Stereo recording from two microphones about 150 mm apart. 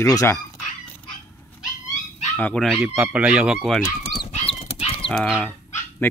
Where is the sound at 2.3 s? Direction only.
5° left (ahead or behind).